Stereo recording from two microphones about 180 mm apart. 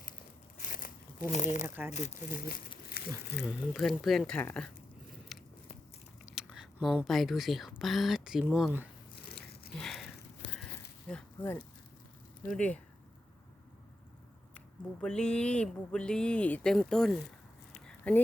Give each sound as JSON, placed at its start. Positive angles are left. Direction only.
{"t": 0.6, "sound": "crumpling", "side_deg": 50}
{"t": 1.3, "sound": "speech", "side_deg": 40}
{"t": 1.6, "sound": "speech", "side_deg": -10}
{"t": 1.9, "sound": "speech", "side_deg": 40}
{"t": 3.0, "sound": "a sound", "side_deg": 60}
{"t": 3.3, "sound": "speech", "side_deg": 0}
{"t": 5.3, "sound": "biting", "side_deg": 0}
{"t": 6.2, "sound": "a sound", "side_deg": -5}
{"t": 7.8, "sound": "speech", "side_deg": 0}
{"t": 9.8, "sound": "a sound", "side_deg": 0}
{"t": 11.1, "sound": "speech", "side_deg": 10}
{"t": 15.0, "sound": "speech", "side_deg": 5}
{"t": 17.7, "sound": "a sound", "side_deg": 5}